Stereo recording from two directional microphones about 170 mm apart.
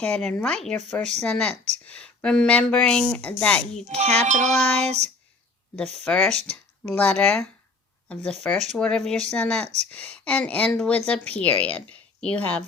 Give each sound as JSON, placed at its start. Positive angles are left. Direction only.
{"t": 0.0, "sound": "speech", "side_deg": 10}
{"t": 3.8, "sound": "music", "side_deg": -40}
{"t": 5.7, "sound": "speech", "side_deg": 10}